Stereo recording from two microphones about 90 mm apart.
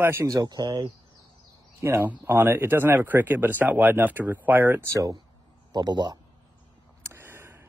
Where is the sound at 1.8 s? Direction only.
25° right (ahead or behind).